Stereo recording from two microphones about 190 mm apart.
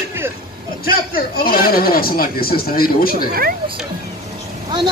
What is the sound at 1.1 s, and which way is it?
Speech, 50° left (ahead or behind).